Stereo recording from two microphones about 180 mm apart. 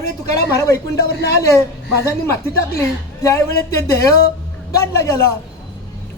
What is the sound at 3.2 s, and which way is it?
Speech, 15° left (ahead or behind).